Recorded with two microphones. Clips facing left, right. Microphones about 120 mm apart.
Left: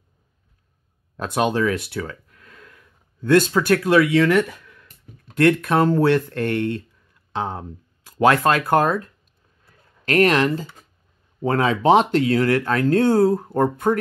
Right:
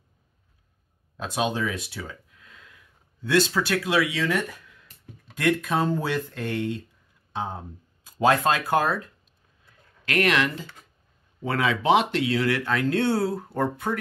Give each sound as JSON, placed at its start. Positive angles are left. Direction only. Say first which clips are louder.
{"t": 1.1, "sound": "speech", "louder": "left 6 dB", "side_deg": 55}
{"t": 7.3, "sound": "speech", "louder": "left 5 dB", "side_deg": 75}
{"t": 9.7, "sound": "a sound", "louder": "left 8 dB", "side_deg": 40}
{"t": 11.4, "sound": "speech", "louder": "left 5 dB", "side_deg": 40}